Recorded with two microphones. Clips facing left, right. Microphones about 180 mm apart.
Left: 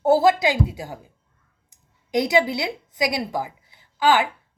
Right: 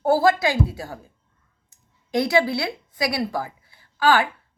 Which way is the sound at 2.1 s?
20° left (ahead or behind).